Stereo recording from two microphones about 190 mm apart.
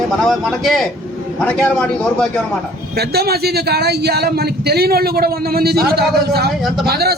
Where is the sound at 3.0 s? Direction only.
55° right (ahead or behind).